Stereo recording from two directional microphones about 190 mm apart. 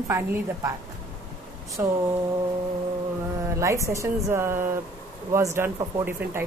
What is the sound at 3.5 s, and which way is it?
Speech, 15° right (ahead or behind).